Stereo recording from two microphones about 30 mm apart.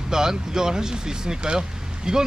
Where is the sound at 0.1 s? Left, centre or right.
Centre.